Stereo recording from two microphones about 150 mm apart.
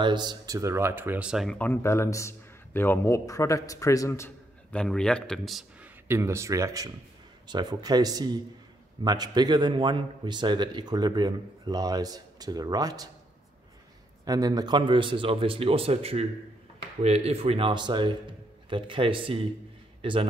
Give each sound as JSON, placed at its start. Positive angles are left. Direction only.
{"t": 0.0, "sound": "speech", "side_deg": -30}
{"t": 1.6, "sound": "a man's voice", "side_deg": 15}
{"t": 4.7, "sound": "speech", "side_deg": 5}
{"t": 6.0, "sound": "a man's voice", "side_deg": -15}
{"t": 14.2, "sound": "a man's voice", "side_deg": -25}